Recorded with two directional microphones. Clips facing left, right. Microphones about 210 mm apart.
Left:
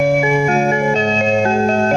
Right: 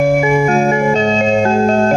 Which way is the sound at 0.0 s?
50° right (ahead or behind).